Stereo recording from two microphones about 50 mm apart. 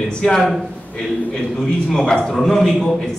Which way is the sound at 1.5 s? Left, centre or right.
Centre.